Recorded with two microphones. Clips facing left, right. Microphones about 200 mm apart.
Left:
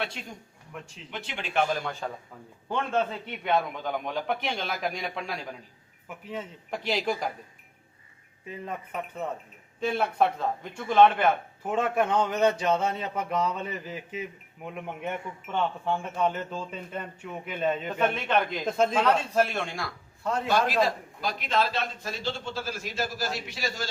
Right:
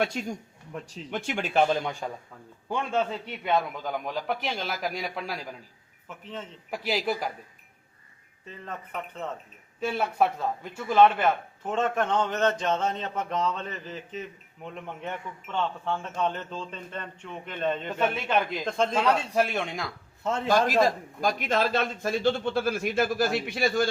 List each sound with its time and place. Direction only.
0.0 s speech: 45° right (ahead or behind)
1.7 s a man's voice: 15° right (ahead or behind)
3.7 s a man's voice: centre (ahead or behind)
6.2 s a man's voice: 10° left (ahead or behind)
6.7 s a man's voice: 5° right (ahead or behind)
8.4 s a man's voice: 10° left (ahead or behind)
9.8 s a man's voice: 5° right (ahead or behind)
11.2 s a man's voice: 10° left (ahead or behind)
18.0 s a man's voice: 5° right (ahead or behind)
18.6 s a man's voice: 5° left (ahead or behind)
19.3 s speech: 15° right (ahead or behind)
20.5 s a man's voice: 45° right (ahead or behind)